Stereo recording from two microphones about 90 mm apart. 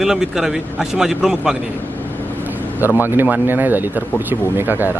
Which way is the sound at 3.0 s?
20° right (ahead or behind).